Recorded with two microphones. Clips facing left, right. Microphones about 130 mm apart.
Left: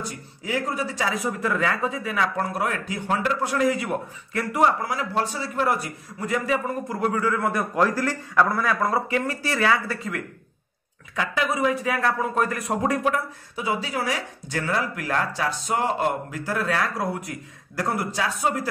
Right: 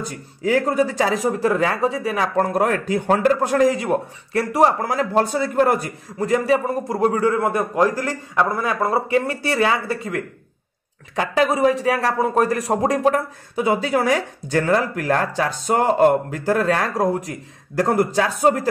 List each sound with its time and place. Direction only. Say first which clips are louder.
0.5 s a man's voice: right 9 dB; 45° right (ahead or behind)
4.8 s speech: right 6 dB; 45° right (ahead or behind)
6.1 s a man's voice: right 7 dB; 35° right (ahead or behind)
11.1 s a man's voice: right 6 dB; 35° right (ahead or behind)
13.6 s speech: right 8 dB; 55° right (ahead or behind)